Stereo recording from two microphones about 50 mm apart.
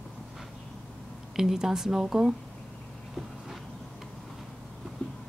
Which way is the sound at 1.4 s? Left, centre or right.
Centre.